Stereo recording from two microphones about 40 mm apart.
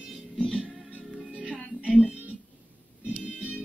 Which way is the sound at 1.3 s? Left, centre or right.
Right.